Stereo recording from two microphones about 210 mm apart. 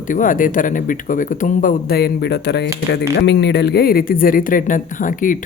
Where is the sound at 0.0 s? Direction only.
40° left (ahead or behind).